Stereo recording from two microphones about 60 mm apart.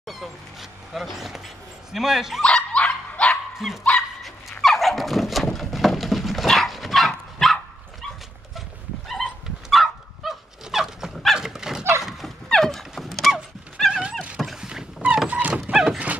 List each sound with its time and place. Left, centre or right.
0.0 s a sound: centre
1.9 s speech: centre
2.4 s dog: centre
3.5 s dog: centre
4.2 s a sound: centre
7.4 s dog: centre
9.7 s dog: centre
15.2 s dog: right
15.7 s dog: centre